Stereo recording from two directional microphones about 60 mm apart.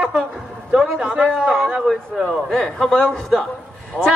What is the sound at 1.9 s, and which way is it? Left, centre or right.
Speech, centre.